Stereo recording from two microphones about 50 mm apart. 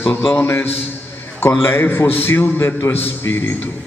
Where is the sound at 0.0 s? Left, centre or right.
Left.